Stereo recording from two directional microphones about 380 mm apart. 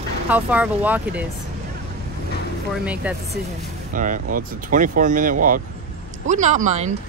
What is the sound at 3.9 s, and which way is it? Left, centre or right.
Speech, right.